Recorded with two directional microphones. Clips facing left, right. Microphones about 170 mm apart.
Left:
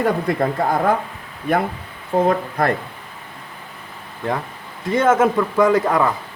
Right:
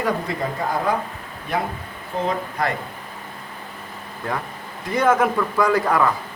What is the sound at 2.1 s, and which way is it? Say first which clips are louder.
Speech: left 7 dB; 50° left (ahead or behind).